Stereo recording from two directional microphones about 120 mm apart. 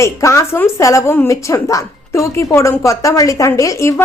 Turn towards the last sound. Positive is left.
turn(degrees=25)  # may be behind; listen again after turning